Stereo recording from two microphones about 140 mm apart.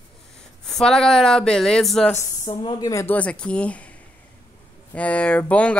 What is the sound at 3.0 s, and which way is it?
Speech, 10° left (ahead or behind).